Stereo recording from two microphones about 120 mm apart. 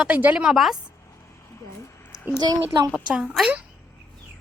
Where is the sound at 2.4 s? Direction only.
35° right (ahead or behind).